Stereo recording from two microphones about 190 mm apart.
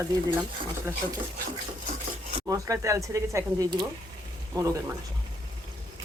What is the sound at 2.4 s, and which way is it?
Speech, 15° right (ahead or behind).